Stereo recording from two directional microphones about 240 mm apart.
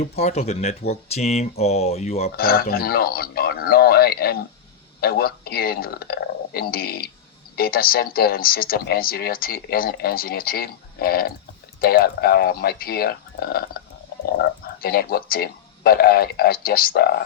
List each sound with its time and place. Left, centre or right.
0.0 s speech: left
2.3 s speech: left